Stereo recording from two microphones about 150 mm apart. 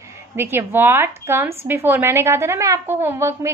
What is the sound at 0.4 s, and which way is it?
A woman's voice, 15° right (ahead or behind).